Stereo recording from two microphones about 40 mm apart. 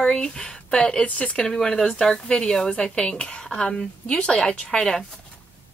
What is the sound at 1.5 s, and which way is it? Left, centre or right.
A woman's voice, centre.